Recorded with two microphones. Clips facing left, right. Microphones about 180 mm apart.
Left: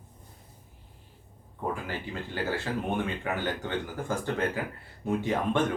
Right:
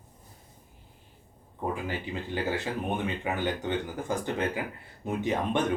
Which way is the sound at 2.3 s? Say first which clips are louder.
Even; 20° right (ahead or behind).